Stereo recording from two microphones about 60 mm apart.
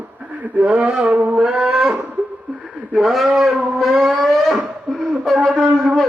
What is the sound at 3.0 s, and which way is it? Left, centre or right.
Speech, centre.